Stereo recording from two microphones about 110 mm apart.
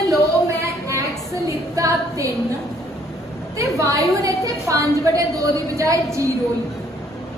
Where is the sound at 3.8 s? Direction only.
30° right (ahead or behind).